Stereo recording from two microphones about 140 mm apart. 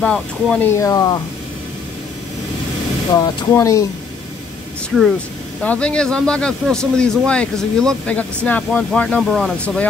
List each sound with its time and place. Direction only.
0.0 s speech: 5° left (ahead or behind)
0.7 s speech: 20° left (ahead or behind)
3.2 s speech: 25° left (ahead or behind)
5.6 s speech: 10° left (ahead or behind)